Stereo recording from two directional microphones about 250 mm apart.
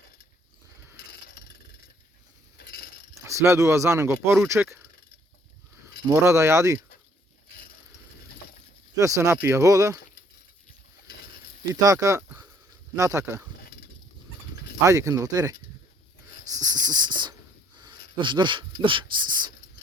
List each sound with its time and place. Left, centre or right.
2.6 s mechanisms: left
3.2 s speech: centre
6.1 s speech: centre
9.0 s speech: centre
11.7 s speech: centre
14.8 s speech: centre
16.6 s a sound: centre
18.2 s speech: centre